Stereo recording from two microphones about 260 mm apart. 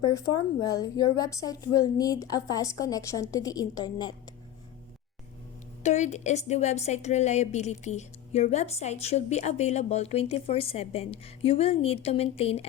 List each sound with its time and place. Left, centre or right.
0.6 s a woman's voice: centre
5.8 s a woman's voice: left